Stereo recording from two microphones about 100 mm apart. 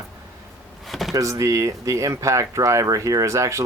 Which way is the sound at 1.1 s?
35° right (ahead or behind).